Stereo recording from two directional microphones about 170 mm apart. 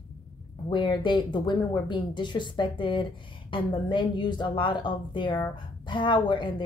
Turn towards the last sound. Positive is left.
turn(degrees=30)  # may be behind; listen again after turning